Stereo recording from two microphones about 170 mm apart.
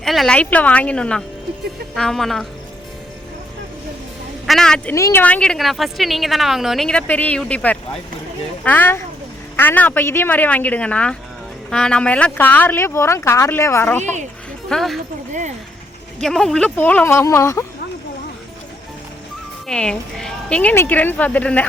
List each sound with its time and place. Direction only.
0.0 s speech: centre (ahead or behind)
4.4 s a woman's voice: 5° left (ahead or behind)
4.9 s speech: 15° left (ahead or behind)
14.0 s speech: 45° right (ahead or behind)
14.7 s speech: centre (ahead or behind)
15.3 s speech: 45° right (ahead or behind)
16.2 s speech: centre (ahead or behind); by 17.7 s 15° left (ahead or behind)
19.6 s speech: 5° left (ahead or behind)